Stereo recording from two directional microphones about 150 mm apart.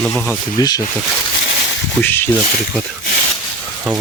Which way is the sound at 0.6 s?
25° left (ahead or behind).